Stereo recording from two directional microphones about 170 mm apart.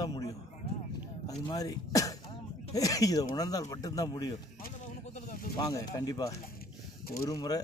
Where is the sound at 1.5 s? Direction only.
20° left (ahead or behind).